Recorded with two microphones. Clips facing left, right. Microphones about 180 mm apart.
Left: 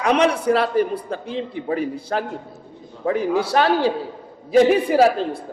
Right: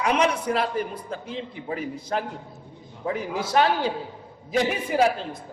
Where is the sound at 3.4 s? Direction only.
65° left (ahead or behind).